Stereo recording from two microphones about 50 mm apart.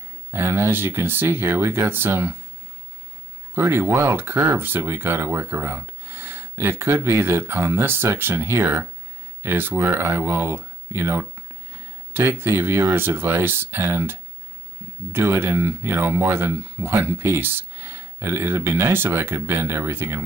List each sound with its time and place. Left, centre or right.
0.3 s speech: right
3.5 s speech: right
9.4 s speech: right
9.9 s speech: right
10.9 s speech: right
12.9 s speech: right
15.3 s speech: right
16.1 s speech: right
19.3 s speech: right